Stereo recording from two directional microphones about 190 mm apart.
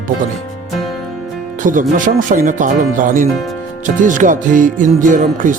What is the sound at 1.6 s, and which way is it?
Music, 45° right (ahead or behind).